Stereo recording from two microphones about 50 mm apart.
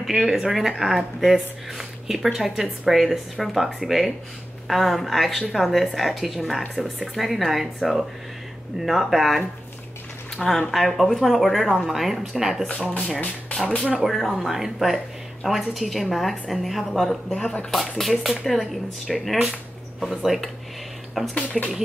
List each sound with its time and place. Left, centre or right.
0.0 s speech: centre
12.6 s speech: left
13.6 s speech: centre
17.3 s speech: centre
17.6 s speech: centre